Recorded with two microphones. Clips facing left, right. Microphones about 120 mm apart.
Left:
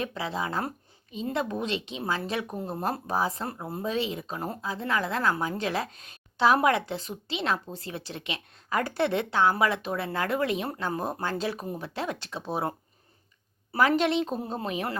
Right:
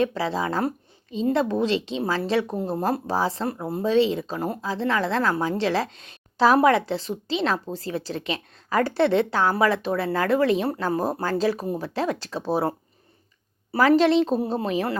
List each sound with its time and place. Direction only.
0.0 s a woman's voice: 35° right (ahead or behind)